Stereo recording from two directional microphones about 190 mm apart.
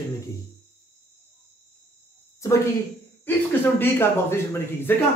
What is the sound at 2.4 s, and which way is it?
A man's voice, 15° left (ahead or behind).